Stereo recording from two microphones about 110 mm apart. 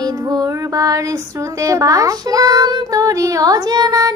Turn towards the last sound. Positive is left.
turn(degrees=-35)  # may be behind; listen again after turning